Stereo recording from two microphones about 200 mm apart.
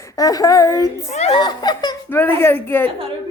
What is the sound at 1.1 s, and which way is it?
Speech, 35° left (ahead or behind).